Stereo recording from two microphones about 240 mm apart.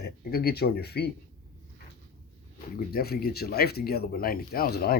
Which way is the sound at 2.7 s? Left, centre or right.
Left.